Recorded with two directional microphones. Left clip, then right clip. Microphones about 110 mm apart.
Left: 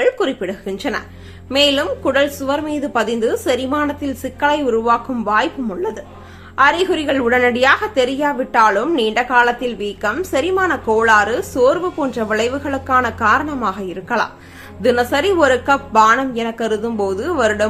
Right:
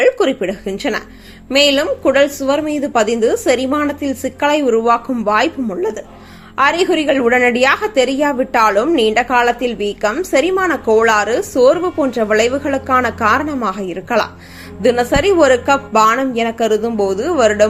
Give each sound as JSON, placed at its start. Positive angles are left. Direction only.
{"t": 0.0, "sound": "a woman's voice", "side_deg": -30}